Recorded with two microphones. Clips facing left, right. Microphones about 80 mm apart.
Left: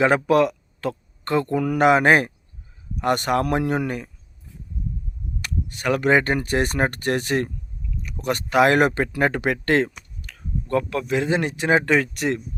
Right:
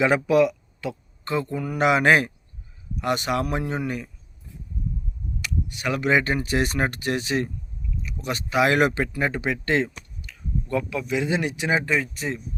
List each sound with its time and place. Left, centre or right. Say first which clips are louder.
0.0 s speech: left 1 dB; left
1.8 s speech: left 2 dB; left
3.8 s speech: left 1 dB; left
5.4 s speech: left 1 dB; left
9.1 s speech: left 4 dB; left
11.9 s speech: left 5 dB; left